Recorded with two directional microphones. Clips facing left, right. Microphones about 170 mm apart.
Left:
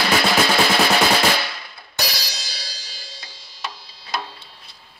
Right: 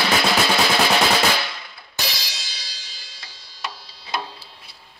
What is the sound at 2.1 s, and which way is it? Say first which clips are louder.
Music: left 3 dB; 40° left (ahead or behind).